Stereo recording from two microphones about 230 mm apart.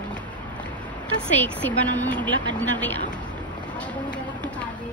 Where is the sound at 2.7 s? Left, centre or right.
Centre.